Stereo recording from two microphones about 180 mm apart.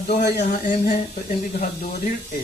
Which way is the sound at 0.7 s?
45° left (ahead or behind).